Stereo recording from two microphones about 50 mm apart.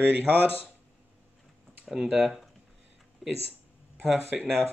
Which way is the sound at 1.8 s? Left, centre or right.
Centre.